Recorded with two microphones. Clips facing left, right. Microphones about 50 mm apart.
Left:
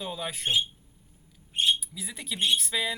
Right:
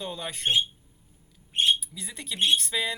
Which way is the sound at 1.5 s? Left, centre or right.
Right.